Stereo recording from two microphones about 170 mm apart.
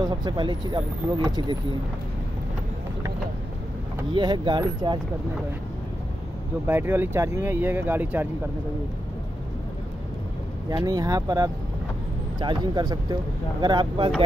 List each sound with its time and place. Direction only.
0.0 s speech: 25° right (ahead or behind)
4.1 s speech: 25° right (ahead or behind)
6.7 s speech: 15° right (ahead or behind)
10.7 s speech: 20° right (ahead or behind)